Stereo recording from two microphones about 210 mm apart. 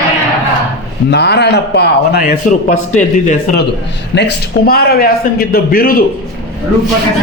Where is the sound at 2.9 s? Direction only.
35° left (ahead or behind).